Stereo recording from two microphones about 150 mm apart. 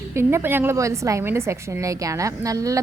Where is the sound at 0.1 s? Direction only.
15° right (ahead or behind).